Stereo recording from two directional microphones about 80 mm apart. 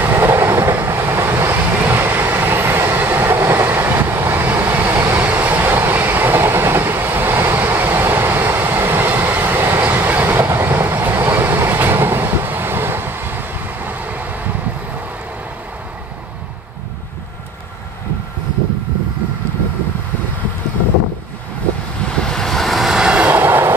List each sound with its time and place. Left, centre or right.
0.0 s vehicle: right
22.2 s vehicle: centre
23.2 s train: right